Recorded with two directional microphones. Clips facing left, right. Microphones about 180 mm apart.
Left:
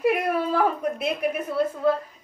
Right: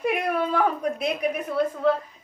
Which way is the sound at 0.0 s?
5° left (ahead or behind).